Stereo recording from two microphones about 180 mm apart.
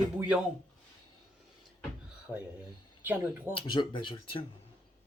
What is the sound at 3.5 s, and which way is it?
Speech, 25° left (ahead or behind).